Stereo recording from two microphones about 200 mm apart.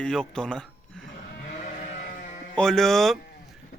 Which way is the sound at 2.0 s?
40° left (ahead or behind).